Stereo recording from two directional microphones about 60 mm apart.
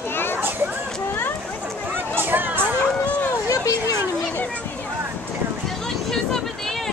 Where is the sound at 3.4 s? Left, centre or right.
Left.